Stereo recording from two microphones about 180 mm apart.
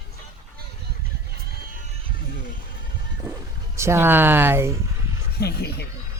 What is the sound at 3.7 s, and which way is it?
Speech, 15° right (ahead or behind).